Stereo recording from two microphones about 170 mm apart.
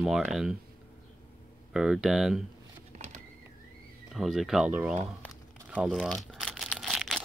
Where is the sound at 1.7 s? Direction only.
5° right (ahead or behind).